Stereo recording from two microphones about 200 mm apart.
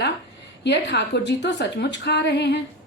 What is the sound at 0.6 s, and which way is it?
A woman's voice, 60° left (ahead or behind).